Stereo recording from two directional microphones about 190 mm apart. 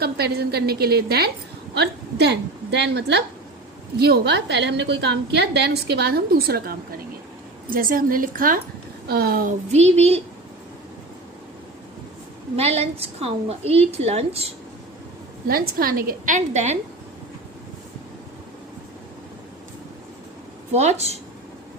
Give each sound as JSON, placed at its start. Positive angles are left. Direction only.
{"t": 0.0, "sound": "a woman's voice", "side_deg": -55}
{"t": 12.5, "sound": "a woman's voice", "side_deg": -35}
{"t": 15.4, "sound": "a woman's voice", "side_deg": -50}
{"t": 20.7, "sound": "a woman's voice", "side_deg": -35}